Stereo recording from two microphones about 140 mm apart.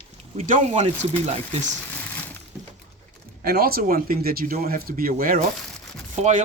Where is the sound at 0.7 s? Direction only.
45° right (ahead or behind).